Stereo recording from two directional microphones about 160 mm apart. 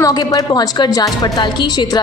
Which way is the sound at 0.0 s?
25° left (ahead or behind).